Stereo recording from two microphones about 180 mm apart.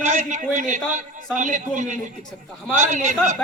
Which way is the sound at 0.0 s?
45° right (ahead or behind).